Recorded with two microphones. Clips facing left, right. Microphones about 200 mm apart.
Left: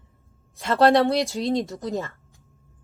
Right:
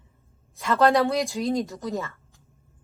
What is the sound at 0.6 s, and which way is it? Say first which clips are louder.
A woman's voice: left 2 dB; 30° left (ahead or behind).